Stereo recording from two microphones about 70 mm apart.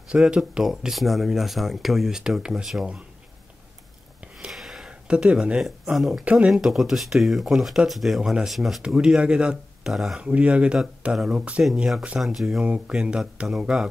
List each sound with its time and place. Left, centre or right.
0.1 s speech: centre
4.5 s a sound: centre
5.0 s speech: centre
6.2 s speech: centre
6.5 s speech: centre
10.2 s speech: centre
12.6 s speech: centre